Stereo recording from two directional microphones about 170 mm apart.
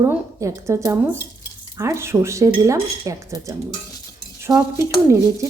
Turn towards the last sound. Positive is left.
turn(degrees=-15)  # may be behind; listen again after turning